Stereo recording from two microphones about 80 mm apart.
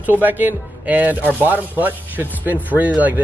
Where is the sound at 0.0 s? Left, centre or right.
Right.